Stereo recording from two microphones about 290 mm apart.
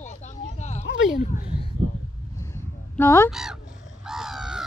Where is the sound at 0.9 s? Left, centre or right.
Left.